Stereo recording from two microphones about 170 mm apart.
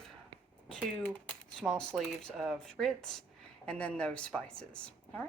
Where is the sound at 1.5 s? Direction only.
Centre (ahead or behind).